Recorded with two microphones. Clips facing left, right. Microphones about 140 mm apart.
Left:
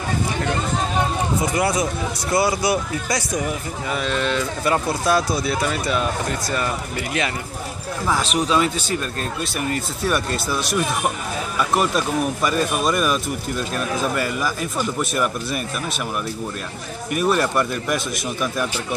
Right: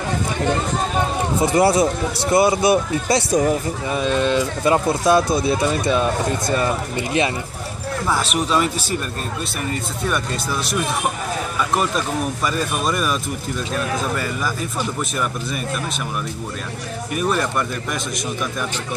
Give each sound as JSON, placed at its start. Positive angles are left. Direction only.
{"t": 1.4, "sound": "speech", "side_deg": -30}
{"t": 3.9, "sound": "speech", "side_deg": -20}
{"t": 8.1, "sound": "speech", "side_deg": -5}
{"t": 10.0, "sound": "speech", "side_deg": 5}
{"t": 12.4, "sound": "speech", "side_deg": 0}
{"t": 15.0, "sound": "speech", "side_deg": 5}
{"t": 17.2, "sound": "speech", "side_deg": 5}